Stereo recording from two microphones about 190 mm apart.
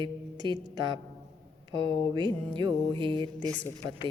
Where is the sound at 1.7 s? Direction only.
25° right (ahead or behind).